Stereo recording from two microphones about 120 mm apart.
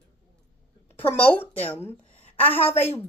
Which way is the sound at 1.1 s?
15° left (ahead or behind).